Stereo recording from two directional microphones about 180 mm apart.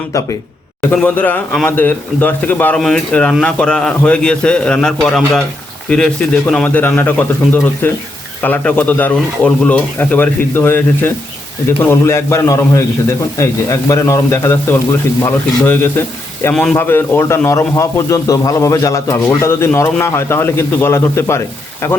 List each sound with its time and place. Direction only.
0.8 s a man's voice: 10° left (ahead or behind)